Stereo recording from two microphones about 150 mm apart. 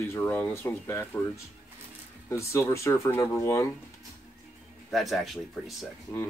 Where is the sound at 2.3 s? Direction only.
20° left (ahead or behind).